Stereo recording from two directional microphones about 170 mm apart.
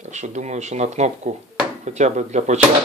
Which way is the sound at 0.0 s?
45° right (ahead or behind).